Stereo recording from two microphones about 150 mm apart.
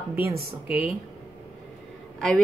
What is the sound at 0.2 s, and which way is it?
Speech, 90° right.